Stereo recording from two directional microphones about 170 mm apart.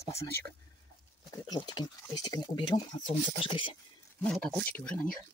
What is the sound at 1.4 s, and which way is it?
Speech, 25° left (ahead or behind).